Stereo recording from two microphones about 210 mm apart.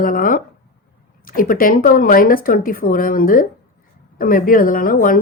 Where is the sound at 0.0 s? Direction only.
40° left (ahead or behind).